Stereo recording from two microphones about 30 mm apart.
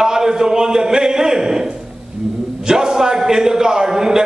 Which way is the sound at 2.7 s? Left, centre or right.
Right.